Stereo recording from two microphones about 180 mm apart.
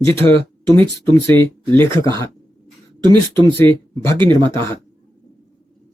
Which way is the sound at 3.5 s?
15° left (ahead or behind).